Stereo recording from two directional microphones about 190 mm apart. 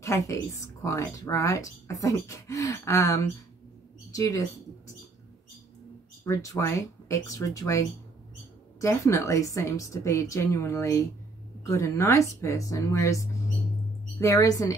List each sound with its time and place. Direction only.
0.0 s speech: 15° left (ahead or behind)
6.2 s speech: 15° left (ahead or behind)
8.8 s speech: 15° left (ahead or behind)